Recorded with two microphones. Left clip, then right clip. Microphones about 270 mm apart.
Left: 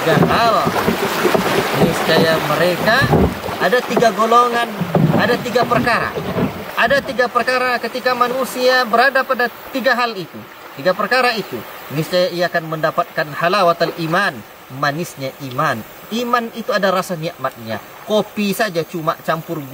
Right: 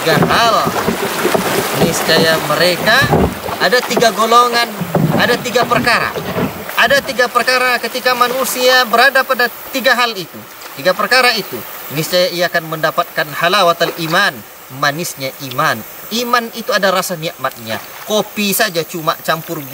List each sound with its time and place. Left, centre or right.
0.0 s speech: centre
1.4 s speech: centre
6.2 s boat: centre
7.3 s speech: centre
8.3 s speech: centre
8.9 s speech: centre